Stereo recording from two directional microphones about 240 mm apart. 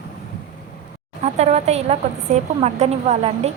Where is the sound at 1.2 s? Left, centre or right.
Right.